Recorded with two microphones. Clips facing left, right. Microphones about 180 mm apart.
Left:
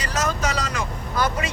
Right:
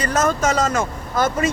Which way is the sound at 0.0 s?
50° right (ahead or behind).